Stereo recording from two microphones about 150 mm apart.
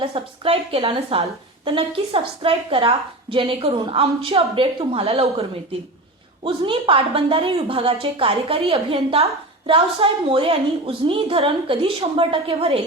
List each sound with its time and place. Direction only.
0.0 s a woman's voice: 40° right (ahead or behind)
6.4 s a woman's voice: 35° right (ahead or behind)